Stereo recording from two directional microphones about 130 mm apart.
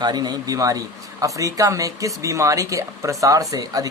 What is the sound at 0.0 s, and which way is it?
Speech, 30° right (ahead or behind).